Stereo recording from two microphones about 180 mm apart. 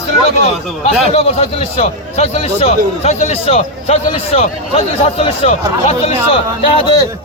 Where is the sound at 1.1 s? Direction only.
35° left (ahead or behind).